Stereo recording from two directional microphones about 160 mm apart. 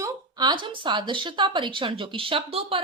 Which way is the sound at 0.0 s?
25° right (ahead or behind).